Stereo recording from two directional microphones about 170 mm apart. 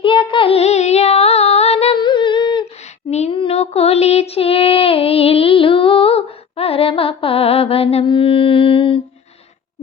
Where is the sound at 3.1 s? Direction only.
40° left (ahead or behind).